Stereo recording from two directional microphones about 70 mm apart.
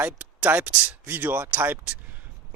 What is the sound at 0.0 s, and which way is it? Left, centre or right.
Speech, right.